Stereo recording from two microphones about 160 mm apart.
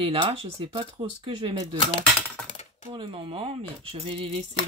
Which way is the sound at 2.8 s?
30° right (ahead or behind).